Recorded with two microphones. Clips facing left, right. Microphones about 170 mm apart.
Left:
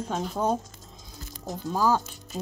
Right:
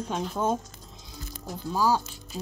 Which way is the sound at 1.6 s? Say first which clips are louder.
Left 1 dB; 50° left (ahead or behind).